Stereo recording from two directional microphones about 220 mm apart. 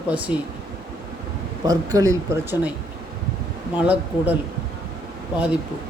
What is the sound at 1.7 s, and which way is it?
Speech, 15° right (ahead or behind).